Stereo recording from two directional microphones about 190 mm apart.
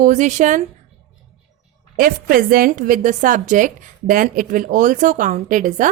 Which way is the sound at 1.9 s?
50° right (ahead or behind).